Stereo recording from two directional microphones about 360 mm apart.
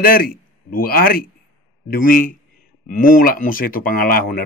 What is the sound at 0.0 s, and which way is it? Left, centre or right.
A man's voice, left.